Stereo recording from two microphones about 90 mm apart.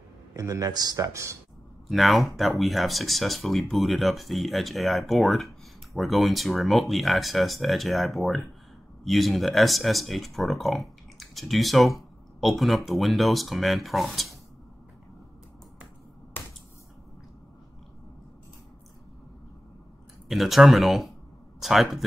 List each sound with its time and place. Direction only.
0.3 s a man's voice: 35° right (ahead or behind)
1.9 s speech: centre (ahead or behind)
16.3 s finger snapping: 20° left (ahead or behind)
20.2 s speech: centre (ahead or behind)